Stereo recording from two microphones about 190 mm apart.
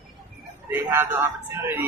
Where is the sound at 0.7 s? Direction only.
10° right (ahead or behind).